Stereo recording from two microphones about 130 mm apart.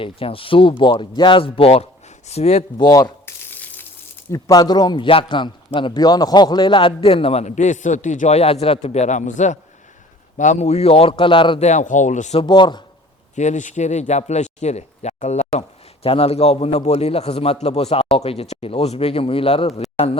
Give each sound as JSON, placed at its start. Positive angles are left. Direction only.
{"t": 0.0, "sound": "a man's voice", "side_deg": 45}
{"t": 2.7, "sound": "a man's voice", "side_deg": 30}
{"t": 3.2, "sound": "a sound", "side_deg": 15}
{"t": 4.3, "sound": "a man's voice", "side_deg": 25}
{"t": 11.6, "sound": "speech", "side_deg": 70}
{"t": 12.4, "sound": "a man's voice", "side_deg": 35}
{"t": 13.3, "sound": "speech", "side_deg": 65}
{"t": 16.0, "sound": "a man's voice", "side_deg": 50}